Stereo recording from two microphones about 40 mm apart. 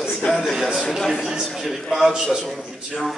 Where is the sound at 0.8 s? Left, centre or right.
Centre.